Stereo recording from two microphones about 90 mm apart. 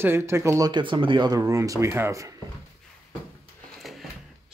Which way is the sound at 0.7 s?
65° right (ahead or behind).